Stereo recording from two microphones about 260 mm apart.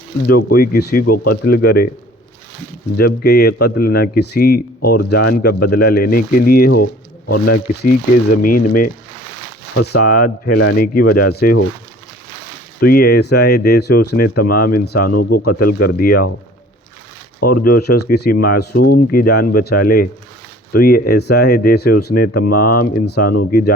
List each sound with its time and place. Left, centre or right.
0.3 s a man's voice: left
1.0 s speech: left
1.3 s a man's voice: left
3.0 s a man's voice: left
12.8 s a man's voice: left
17.4 s a man's voice: left